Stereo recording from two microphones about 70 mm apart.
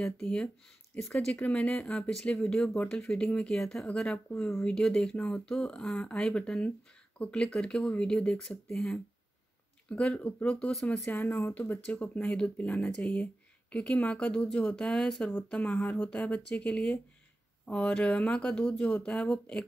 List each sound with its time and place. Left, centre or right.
0.2 s speech: centre
0.9 s speech: left
2.0 s speech: centre
4.4 s speech: centre
4.6 s speech: centre
9.8 s speech: centre
11.9 s speech: centre
15.5 s speech: centre
17.6 s speech: centre